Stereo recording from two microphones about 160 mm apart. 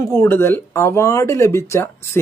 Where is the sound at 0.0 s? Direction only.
15° left (ahead or behind).